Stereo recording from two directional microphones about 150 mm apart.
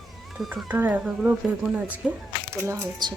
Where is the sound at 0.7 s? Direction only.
10° right (ahead or behind).